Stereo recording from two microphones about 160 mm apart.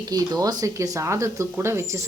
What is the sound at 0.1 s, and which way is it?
Speech, 25° right (ahead or behind).